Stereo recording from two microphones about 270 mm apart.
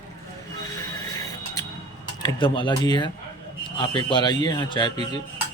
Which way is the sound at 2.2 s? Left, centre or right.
Centre.